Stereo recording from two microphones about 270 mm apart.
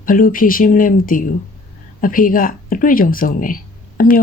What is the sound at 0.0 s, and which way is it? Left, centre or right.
Speech, left.